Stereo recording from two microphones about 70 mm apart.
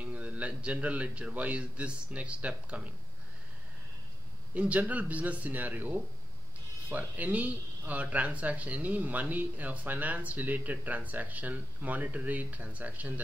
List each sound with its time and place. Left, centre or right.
0.0 s speech: right
4.6 s speech: right